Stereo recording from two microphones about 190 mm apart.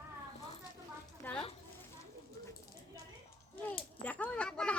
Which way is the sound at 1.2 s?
5° left (ahead or behind).